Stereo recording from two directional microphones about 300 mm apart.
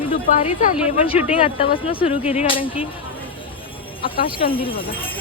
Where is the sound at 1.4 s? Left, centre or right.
Centre.